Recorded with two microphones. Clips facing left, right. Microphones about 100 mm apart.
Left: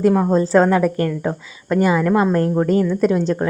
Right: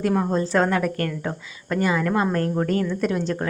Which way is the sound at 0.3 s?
35° left (ahead or behind).